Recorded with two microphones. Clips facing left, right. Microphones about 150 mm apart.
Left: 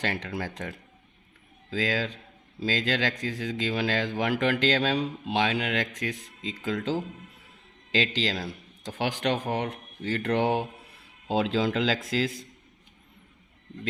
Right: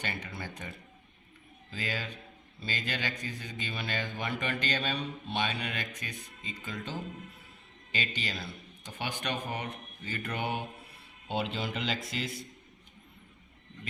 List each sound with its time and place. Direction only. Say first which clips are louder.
0.0 s speech: left 8 dB; 90° left